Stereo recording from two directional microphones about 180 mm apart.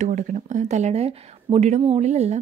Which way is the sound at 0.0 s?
45° right (ahead or behind).